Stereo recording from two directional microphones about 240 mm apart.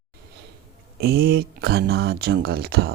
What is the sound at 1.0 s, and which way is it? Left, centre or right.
Speech, right.